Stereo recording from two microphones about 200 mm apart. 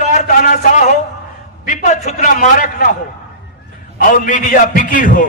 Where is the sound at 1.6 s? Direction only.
40° left (ahead or behind).